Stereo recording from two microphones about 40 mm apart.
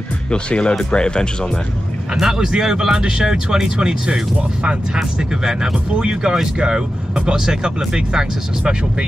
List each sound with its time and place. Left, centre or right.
0.3 s speech: left
2.1 s speech: centre